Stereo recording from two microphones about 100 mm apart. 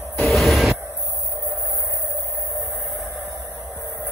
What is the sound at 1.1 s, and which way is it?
Music, centre (ahead or behind).